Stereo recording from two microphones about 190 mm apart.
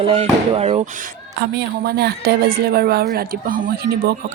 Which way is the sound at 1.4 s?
60° right (ahead or behind).